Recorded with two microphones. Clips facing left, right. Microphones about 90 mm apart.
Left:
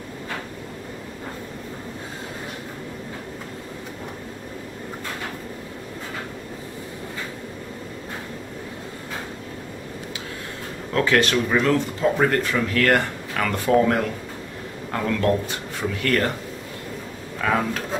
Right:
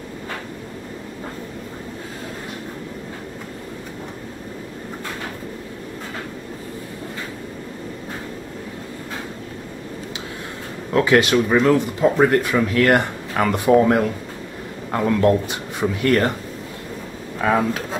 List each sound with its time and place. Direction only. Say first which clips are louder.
10.9 s speech: right 4 dB; 15° right (ahead or behind)
17.4 s speech: right 3 dB; 20° right (ahead or behind)